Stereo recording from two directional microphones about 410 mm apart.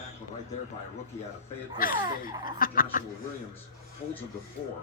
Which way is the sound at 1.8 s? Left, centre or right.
Left.